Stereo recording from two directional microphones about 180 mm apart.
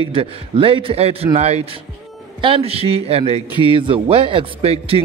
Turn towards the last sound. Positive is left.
turn(degrees=-35)  # may be behind; listen again after turning